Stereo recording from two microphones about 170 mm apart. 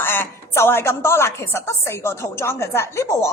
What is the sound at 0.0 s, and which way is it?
A woman's voice, 15° left (ahead or behind).